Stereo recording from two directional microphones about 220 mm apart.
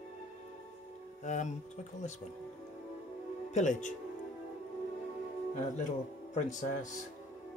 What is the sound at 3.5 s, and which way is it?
Speech, 35° left (ahead or behind).